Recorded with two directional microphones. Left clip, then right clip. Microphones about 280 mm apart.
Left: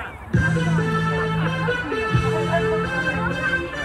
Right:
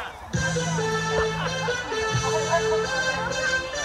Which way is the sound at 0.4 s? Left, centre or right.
Right.